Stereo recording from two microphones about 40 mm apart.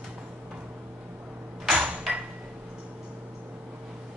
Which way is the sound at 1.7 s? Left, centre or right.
Right.